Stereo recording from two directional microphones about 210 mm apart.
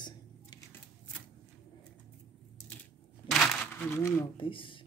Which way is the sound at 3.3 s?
10° left (ahead or behind).